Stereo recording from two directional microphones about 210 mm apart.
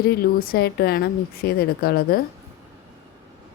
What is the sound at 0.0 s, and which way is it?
Speech, 45° left (ahead or behind).